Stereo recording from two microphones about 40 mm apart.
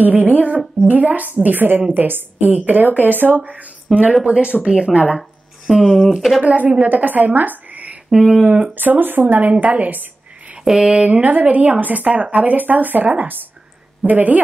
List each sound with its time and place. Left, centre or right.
0.0 s a sound: right
0.8 s speech: right
2.4 s speech: right
5.7 s speech: centre
6.4 s a woman's voice: right
8.1 s speech: right
8.7 s speech: right
9.4 s a woman's voice: right
10.6 s speech: centre
11.2 s a woman's voice: right